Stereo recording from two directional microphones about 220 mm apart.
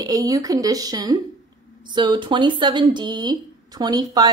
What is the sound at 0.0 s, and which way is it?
A woman's voice, 15° right (ahead or behind).